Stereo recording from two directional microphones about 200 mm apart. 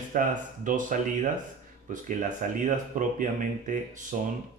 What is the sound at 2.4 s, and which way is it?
Speech, 40° right (ahead or behind).